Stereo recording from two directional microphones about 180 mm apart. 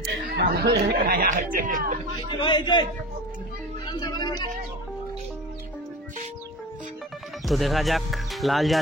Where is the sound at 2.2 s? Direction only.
25° left (ahead or behind).